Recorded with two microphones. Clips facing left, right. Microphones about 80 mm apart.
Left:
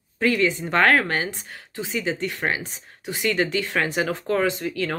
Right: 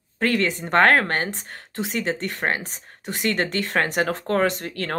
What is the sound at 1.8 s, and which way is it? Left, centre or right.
Speech, right.